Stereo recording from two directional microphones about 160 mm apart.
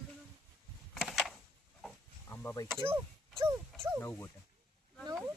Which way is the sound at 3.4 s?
15° right (ahead or behind).